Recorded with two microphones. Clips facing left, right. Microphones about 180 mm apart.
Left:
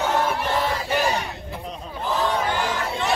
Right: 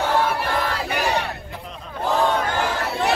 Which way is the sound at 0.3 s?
65° right (ahead or behind).